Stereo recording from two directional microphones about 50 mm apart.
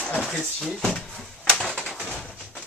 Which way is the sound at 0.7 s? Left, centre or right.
Centre.